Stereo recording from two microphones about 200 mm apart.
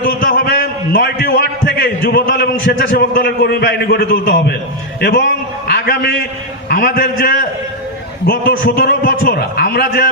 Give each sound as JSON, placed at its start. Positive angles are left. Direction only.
{"t": 0.2, "sound": "a sound", "side_deg": 65}
{"t": 2.3, "sound": "a man's voice", "side_deg": 60}
{"t": 8.3, "sound": "a man's voice", "side_deg": 60}